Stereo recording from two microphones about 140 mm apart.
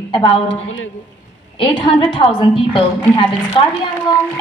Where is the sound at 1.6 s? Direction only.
35° left (ahead or behind).